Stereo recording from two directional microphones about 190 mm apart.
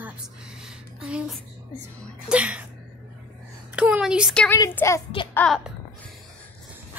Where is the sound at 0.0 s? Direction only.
5° right (ahead or behind).